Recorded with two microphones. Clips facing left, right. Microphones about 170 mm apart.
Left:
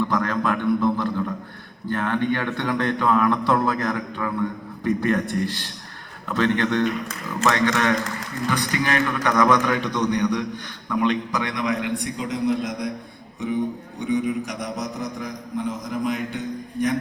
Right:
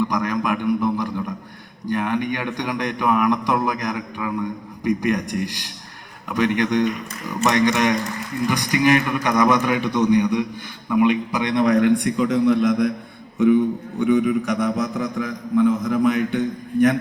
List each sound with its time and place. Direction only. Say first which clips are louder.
0.0 s a man's voice: right 1 dB; 15° right (ahead or behind)
11.4 s a man's voice: right 13 dB; 35° right (ahead or behind)
12.0 s a man's voice: right 6 dB; 60° right (ahead or behind)
14.0 s a man's voice: right 5 dB; 60° right (ahead or behind)